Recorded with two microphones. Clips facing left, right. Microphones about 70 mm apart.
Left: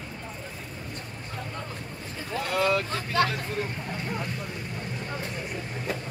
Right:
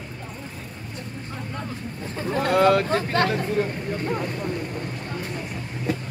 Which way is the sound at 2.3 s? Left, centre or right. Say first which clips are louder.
Right 7 dB; right.